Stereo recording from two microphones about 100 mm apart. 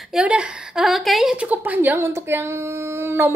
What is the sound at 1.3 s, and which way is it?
Speech, 15° right (ahead or behind).